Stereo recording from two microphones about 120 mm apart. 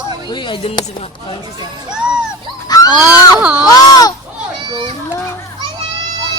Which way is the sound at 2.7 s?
30° left (ahead or behind).